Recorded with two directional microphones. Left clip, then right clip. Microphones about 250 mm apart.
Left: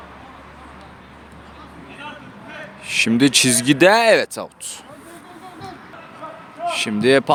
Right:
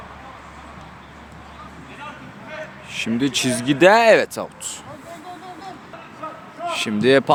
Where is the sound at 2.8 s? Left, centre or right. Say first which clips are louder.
Left 7 dB; left.